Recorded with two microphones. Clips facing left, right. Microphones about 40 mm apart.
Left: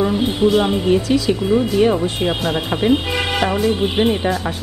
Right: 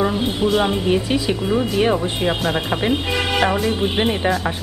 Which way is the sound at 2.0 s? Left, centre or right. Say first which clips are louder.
Left 1 dB; centre.